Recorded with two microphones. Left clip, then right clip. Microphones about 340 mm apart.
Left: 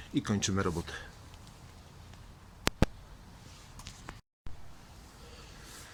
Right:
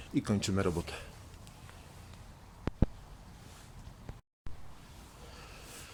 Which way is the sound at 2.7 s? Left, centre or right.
Left.